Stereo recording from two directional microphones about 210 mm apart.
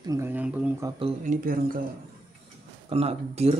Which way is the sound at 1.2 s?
40° right (ahead or behind).